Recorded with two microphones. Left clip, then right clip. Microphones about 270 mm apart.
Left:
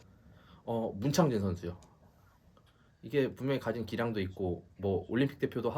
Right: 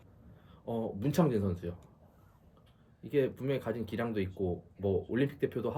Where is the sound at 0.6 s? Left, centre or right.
Centre.